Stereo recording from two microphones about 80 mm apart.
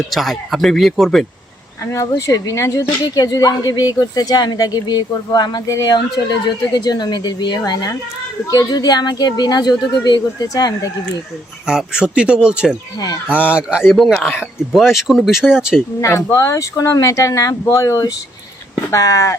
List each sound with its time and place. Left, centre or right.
0.1 s speech: centre
1.9 s speech: left
3.2 s a woman's voice: left
11.6 s speech: centre
13.9 s speech: centre
16.0 s speech: left